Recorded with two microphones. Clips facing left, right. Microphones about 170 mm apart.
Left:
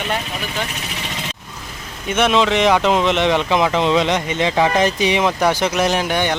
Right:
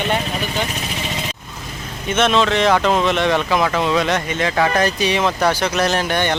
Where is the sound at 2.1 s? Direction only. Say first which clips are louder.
Even; 15° left (ahead or behind).